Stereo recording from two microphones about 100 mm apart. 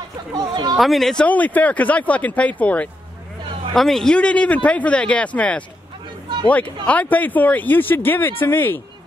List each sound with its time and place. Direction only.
0.3 s speech: 45° right (ahead or behind)
0.7 s speech: centre (ahead or behind)
1.2 s speech: 15° left (ahead or behind)
3.7 s speech: 5° left (ahead or behind); by 8.8 s 20° left (ahead or behind)